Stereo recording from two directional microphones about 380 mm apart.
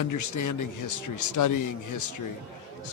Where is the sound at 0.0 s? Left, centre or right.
Left.